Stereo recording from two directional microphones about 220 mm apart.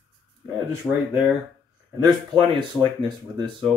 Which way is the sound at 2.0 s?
20° right (ahead or behind).